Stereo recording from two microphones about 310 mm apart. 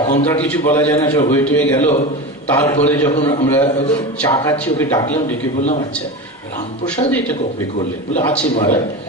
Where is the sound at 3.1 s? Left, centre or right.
Centre.